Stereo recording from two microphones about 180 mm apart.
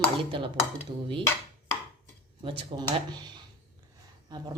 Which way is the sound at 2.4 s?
30° right (ahead or behind).